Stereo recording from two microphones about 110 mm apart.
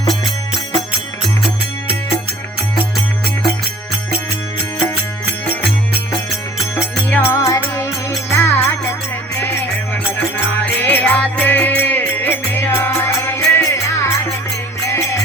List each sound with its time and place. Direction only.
7.1 s music: 20° left (ahead or behind)